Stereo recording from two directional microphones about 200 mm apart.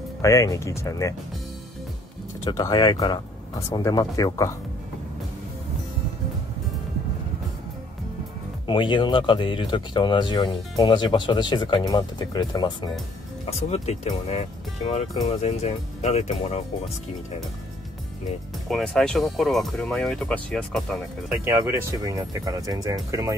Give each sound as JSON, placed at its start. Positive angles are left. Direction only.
{"t": 0.2, "sound": "speech", "side_deg": 15}
{"t": 2.4, "sound": "speech", "side_deg": 20}
{"t": 8.6, "sound": "speech", "side_deg": 25}
{"t": 13.8, "sound": "speech", "side_deg": 35}
{"t": 18.7, "sound": "speech", "side_deg": 0}
{"t": 21.6, "sound": "speech", "side_deg": -15}